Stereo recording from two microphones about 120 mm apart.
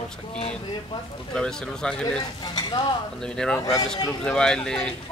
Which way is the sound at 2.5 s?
40° left (ahead or behind).